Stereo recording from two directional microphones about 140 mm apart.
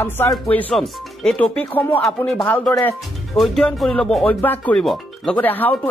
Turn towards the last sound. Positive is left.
turn(degrees=15)  # may be behind; listen again after turning